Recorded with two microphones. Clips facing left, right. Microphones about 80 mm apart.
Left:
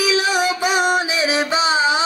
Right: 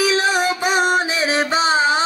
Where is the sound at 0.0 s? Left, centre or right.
Right.